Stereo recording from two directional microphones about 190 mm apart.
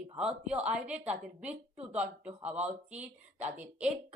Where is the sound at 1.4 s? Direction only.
35° right (ahead or behind).